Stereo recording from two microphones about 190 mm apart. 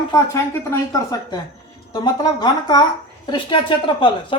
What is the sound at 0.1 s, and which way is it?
Speech, 15° left (ahead or behind).